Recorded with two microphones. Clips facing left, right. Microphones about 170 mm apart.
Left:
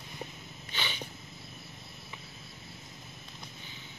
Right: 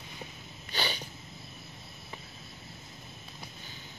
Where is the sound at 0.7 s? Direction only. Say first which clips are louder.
Right 5 dB; 40° right (ahead or behind).